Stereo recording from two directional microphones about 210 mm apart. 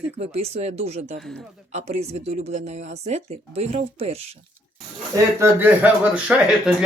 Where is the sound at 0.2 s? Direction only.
30° right (ahead or behind).